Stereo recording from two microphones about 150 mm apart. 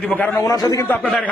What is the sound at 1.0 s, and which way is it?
Speech, 5° left (ahead or behind).